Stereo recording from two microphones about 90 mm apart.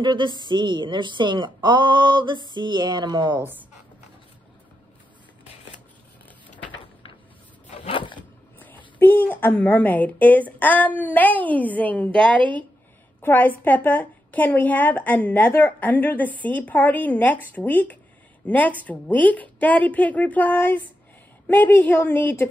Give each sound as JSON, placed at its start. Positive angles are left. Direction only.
{"t": 0.0, "sound": "speech", "side_deg": -60}
{"t": 3.3, "sound": "speech", "side_deg": -20}
{"t": 6.2, "sound": "vehicle", "side_deg": 15}
{"t": 7.9, "sound": "a sound", "side_deg": 65}
{"t": 8.5, "sound": "a sound", "side_deg": 20}
{"t": 9.3, "sound": "a woman's voice", "side_deg": 20}
{"t": 13.2, "sound": "a woman's voice", "side_deg": 20}